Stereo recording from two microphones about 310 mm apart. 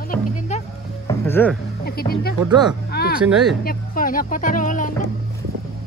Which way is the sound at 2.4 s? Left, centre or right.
Centre.